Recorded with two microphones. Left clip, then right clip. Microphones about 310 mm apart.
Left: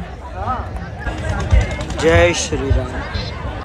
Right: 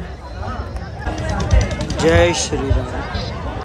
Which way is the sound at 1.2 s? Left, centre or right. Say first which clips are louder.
Right 1 dB; centre.